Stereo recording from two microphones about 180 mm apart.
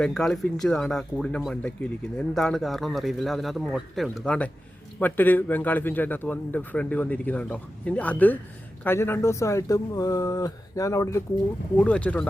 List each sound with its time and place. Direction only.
0.0 s speech: centre (ahead or behind)